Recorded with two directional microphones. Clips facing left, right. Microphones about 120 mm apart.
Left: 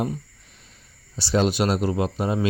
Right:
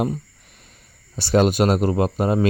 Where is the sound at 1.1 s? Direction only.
55° right (ahead or behind).